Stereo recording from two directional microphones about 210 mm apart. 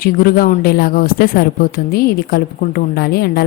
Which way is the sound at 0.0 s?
45° left (ahead or behind).